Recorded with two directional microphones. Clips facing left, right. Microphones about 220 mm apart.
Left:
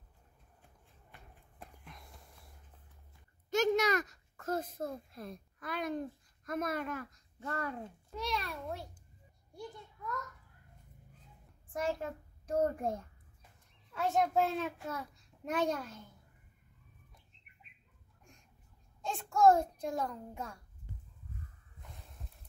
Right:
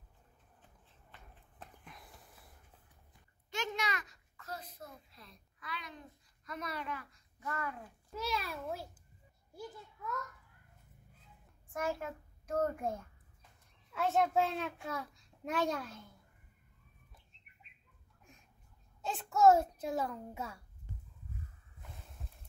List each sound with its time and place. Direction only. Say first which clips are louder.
1.9 s a sound: left 1 dB; centre (ahead or behind)
3.4 s a child's voice: left 10 dB; 40° left (ahead or behind)
7.3 s speech: left 2 dB; 35° left (ahead or behind)
8.1 s a child's voice: even; 5° right (ahead or behind)
9.5 s a sound: left 1 dB; 5° right (ahead or behind)
11.7 s a child's voice: left 2 dB; 30° left (ahead or behind)
13.9 s a child's voice: even; centre (ahead or behind)
18.9 s a child's voice: left 1 dB; 5° right (ahead or behind)